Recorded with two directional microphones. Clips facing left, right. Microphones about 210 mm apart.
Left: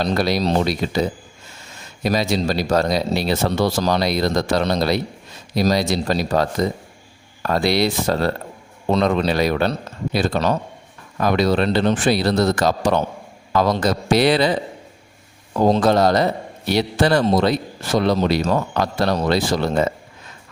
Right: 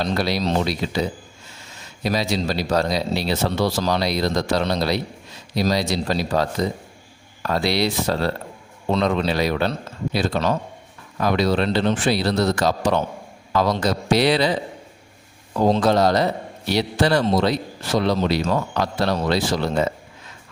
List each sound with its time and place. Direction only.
0.0 s speech: 45° left (ahead or behind)
2.0 s speech: 50° left (ahead or behind)
15.5 s speech: 45° left (ahead or behind)